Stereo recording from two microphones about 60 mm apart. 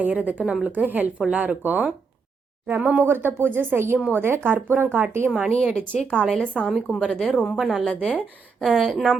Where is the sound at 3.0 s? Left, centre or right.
Right.